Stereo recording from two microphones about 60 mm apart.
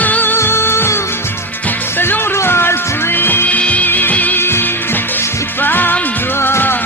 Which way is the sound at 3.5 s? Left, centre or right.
Left.